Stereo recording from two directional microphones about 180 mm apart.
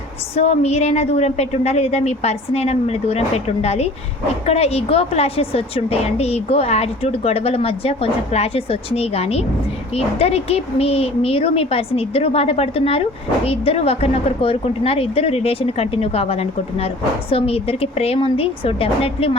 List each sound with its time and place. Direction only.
0.3 s a woman's voice: 35° left (ahead or behind)